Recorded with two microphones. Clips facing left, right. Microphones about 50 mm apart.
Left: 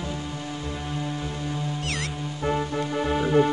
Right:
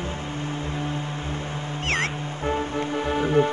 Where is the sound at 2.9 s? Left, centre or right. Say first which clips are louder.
Left 1 dB; centre.